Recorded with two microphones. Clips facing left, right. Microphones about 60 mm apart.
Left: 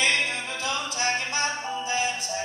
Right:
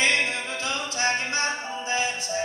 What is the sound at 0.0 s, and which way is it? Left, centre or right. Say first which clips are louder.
Music: right 1 dB; right.